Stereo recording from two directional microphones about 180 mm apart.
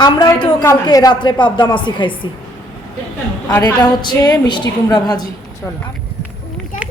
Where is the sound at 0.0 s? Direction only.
25° left (ahead or behind).